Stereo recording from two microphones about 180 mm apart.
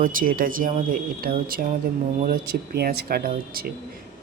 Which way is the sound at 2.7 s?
60° right (ahead or behind).